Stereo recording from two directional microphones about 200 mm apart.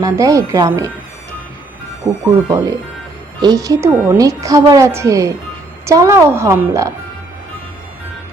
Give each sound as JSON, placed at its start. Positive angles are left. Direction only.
{"t": 0.0, "sound": "a woman's voice", "side_deg": -15}
{"t": 2.5, "sound": "a woman's voice", "side_deg": -15}